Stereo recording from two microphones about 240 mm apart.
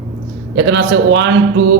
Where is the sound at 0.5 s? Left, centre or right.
Right.